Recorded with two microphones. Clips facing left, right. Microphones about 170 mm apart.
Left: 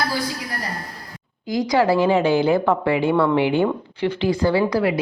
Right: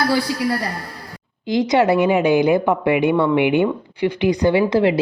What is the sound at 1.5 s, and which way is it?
A woman's voice, 25° right (ahead or behind).